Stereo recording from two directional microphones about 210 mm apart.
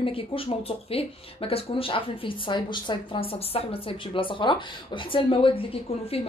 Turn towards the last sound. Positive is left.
turn(degrees=25)  # may be behind; listen again after turning